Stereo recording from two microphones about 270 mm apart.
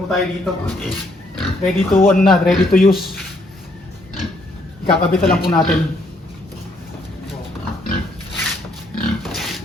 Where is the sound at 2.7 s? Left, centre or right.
Left.